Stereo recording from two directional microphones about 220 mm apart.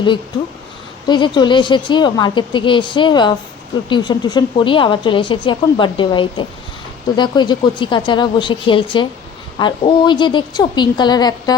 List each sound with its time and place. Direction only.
1.0 s speech: 20° left (ahead or behind)